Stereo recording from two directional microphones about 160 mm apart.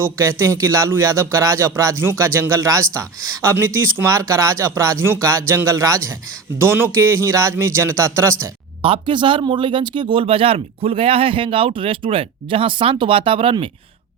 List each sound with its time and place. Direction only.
0.0 s speech: 15° right (ahead or behind)
8.8 s a man's voice: 35° right (ahead or behind)